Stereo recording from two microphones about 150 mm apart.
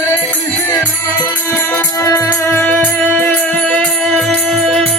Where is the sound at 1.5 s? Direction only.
15° left (ahead or behind).